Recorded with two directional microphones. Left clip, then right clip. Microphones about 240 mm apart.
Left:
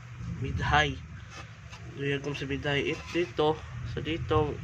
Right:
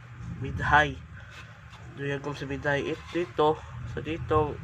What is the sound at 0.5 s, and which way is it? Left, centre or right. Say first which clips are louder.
Speech: right 4 dB; centre.